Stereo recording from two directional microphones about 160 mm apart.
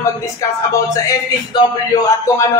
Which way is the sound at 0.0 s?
20° left (ahead or behind).